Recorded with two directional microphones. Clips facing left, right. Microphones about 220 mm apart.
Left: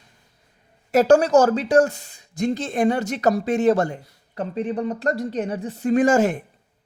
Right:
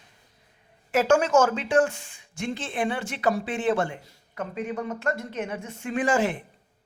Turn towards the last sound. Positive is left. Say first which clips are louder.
# left 7 dB
turn(degrees=45)  # may be behind; listen again after turning